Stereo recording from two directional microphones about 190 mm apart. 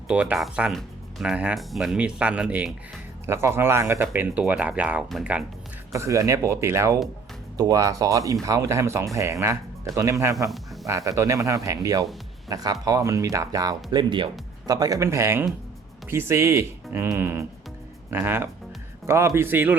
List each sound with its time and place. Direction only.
0.1 s speech: 5° right (ahead or behind)
5.9 s speech: 15° right (ahead or behind)